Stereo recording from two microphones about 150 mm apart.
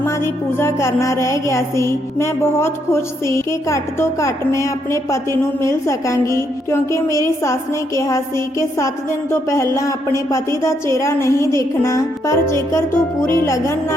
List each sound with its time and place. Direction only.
0.6 s music: 20° left (ahead or behind)